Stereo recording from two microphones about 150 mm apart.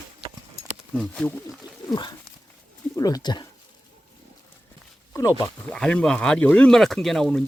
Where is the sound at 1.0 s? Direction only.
10° left (ahead or behind).